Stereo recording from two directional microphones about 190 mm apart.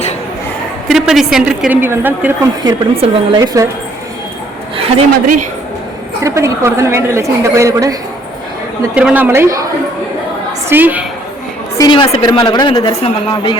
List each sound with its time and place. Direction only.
0.9 s a woman's voice: centre (ahead or behind)
2.6 s a woman's voice: 25° right (ahead or behind)
6.2 s a woman's voice: 15° right (ahead or behind)
9.0 s a woman's voice: 10° right (ahead or behind)
10.7 s a woman's voice: 10° right (ahead or behind)
11.8 s speech: 25° left (ahead or behind)